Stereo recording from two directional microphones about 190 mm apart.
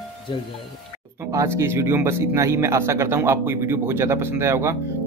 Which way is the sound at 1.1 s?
15° right (ahead or behind).